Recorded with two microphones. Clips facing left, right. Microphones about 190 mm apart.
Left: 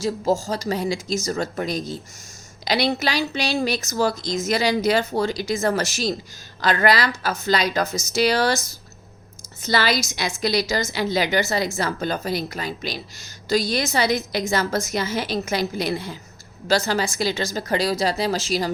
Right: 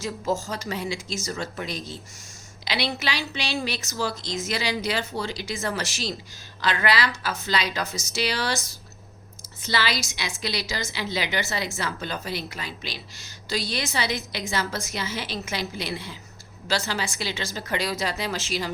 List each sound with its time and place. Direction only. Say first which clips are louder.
0.0 s a woman's voice: left 6 dB; 35° left (ahead or behind)